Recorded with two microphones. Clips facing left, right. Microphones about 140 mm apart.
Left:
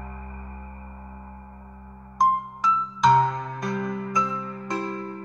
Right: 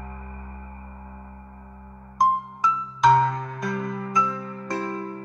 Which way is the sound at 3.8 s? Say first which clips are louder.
Right 1 dB; 20° left (ahead or behind).